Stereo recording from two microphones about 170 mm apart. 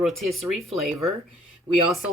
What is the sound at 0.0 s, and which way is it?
Speech, centre (ahead or behind).